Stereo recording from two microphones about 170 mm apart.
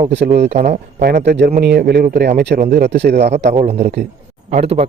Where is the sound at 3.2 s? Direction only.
40° right (ahead or behind).